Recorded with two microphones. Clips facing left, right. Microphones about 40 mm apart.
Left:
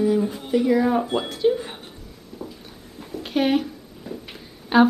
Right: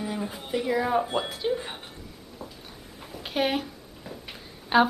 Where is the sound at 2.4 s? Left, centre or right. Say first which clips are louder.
Left 6 dB; centre.